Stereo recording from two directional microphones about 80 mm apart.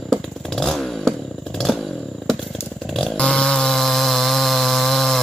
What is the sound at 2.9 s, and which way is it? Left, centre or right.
Chainsaw, centre.